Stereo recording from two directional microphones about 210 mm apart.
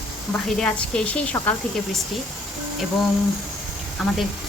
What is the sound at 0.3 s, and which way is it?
A woman's voice, 5° left (ahead or behind).